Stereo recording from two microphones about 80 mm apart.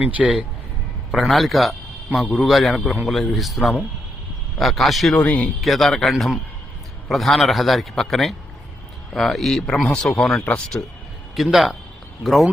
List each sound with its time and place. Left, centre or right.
0.0 s a man's voice: centre
1.1 s a man's voice: centre
5.2 s speech: centre
5.5 s a man's voice: centre
11.3 s a man's voice: centre